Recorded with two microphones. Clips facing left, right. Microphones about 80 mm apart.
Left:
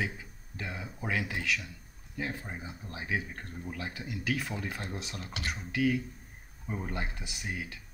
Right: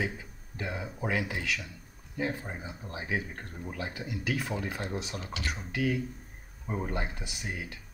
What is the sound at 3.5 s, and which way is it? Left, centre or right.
Speech, right.